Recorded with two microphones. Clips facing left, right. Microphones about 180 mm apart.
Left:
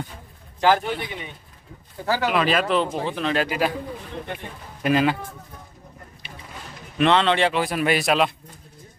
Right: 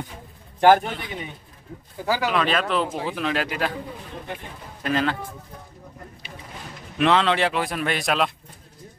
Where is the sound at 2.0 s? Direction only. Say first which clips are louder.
Left 1 dB; 15° right (ahead or behind).